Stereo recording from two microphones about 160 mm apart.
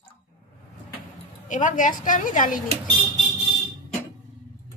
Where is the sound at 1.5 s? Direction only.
50° left (ahead or behind).